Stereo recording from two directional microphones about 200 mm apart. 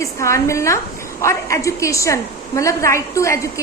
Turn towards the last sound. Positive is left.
turn(degrees=15)  # may be behind; listen again after turning